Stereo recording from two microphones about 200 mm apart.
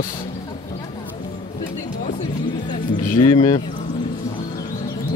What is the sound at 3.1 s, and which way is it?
Speech, 20° left (ahead or behind).